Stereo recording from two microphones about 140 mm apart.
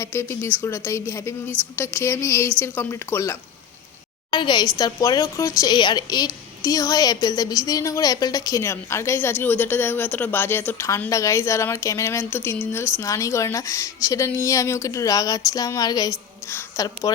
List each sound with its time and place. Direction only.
0.0 s a woman's voice: 20° left (ahead or behind)
4.3 s a woman's voice: 35° left (ahead or behind)